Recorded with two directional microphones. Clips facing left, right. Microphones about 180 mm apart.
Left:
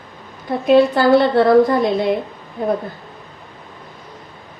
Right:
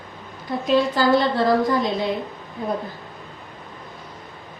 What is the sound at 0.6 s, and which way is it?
A woman's voice, 60° left (ahead or behind).